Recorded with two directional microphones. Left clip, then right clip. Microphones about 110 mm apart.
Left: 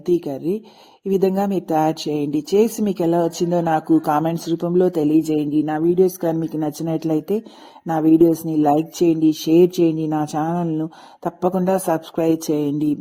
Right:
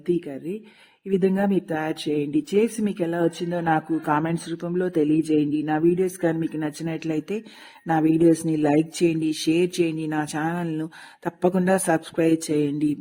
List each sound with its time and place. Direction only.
0.1 s speech: 35° left (ahead or behind)
4.5 s speech: centre (ahead or behind)
4.8 s speech: 25° left (ahead or behind)
10.1 s a sound: 15° right (ahead or behind)
11.2 s speech: 20° left (ahead or behind)